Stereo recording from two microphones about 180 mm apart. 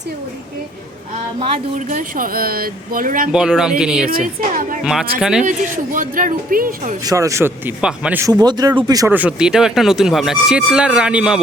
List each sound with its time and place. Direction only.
1.9 s speech: 50° right (ahead or behind)
3.3 s speech: 5° right (ahead or behind)
5.5 s speech: 45° right (ahead or behind)
7.0 s speech: 20° right (ahead or behind)
8.3 s speech: 20° right (ahead or behind)
9.1 s speech: 5° right (ahead or behind)